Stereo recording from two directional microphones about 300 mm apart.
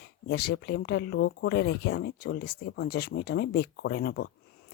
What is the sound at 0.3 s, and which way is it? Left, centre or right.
Speech, left.